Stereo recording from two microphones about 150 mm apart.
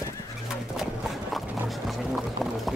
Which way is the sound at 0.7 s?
Centre (ahead or behind).